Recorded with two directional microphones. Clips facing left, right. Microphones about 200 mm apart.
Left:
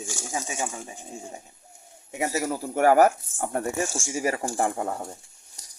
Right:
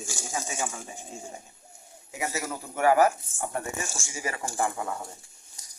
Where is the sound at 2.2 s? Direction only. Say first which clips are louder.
Left 6 dB; 35° left (ahead or behind).